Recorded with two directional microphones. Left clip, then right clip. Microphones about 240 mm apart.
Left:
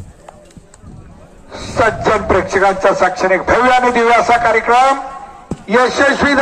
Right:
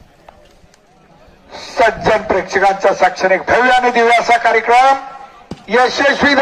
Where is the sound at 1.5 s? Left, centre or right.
Right.